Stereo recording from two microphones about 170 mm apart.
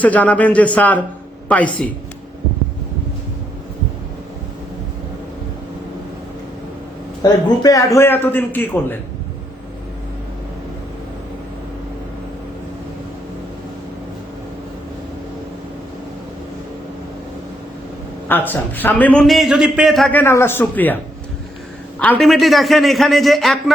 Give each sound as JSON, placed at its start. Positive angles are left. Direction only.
{"t": 0.0, "sound": "a man's voice", "side_deg": 10}
{"t": 7.2, "sound": "a man's voice", "side_deg": 25}
{"t": 18.3, "sound": "a man's voice", "side_deg": 10}